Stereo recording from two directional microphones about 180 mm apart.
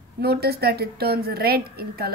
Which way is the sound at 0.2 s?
60° right (ahead or behind).